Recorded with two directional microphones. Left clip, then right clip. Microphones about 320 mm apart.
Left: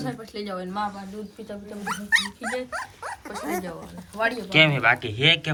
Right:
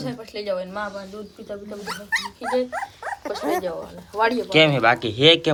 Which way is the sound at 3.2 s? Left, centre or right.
Right.